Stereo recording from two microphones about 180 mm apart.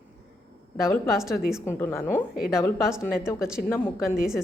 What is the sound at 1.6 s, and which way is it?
A woman's voice, 15° left (ahead or behind).